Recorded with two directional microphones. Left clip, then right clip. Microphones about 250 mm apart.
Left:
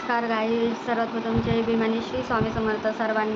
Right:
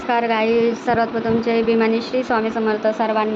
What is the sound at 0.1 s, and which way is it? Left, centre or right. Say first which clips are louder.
A woman's voice: right 7 dB; centre.